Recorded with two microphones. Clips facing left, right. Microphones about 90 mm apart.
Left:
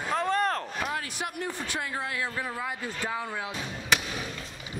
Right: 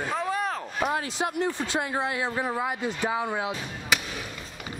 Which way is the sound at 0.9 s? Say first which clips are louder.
Right 6 dB; 25° right (ahead or behind).